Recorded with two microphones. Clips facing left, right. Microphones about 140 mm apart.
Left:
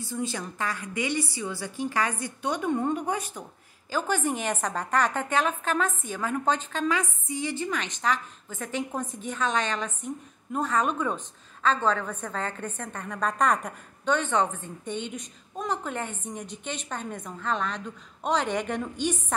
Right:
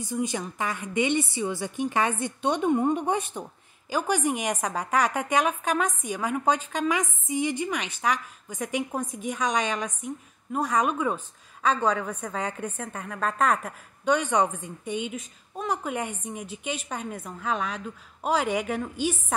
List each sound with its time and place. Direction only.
0.0 s a woman's voice: 15° right (ahead or behind)